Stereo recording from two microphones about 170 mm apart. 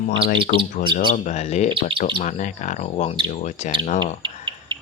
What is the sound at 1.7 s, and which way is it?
Speech, 30° right (ahead or behind).